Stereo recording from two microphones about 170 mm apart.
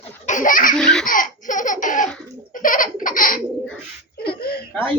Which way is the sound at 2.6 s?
50° left (ahead or behind).